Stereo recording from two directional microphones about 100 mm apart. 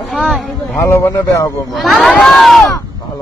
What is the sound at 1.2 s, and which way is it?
Speech, 35° left (ahead or behind).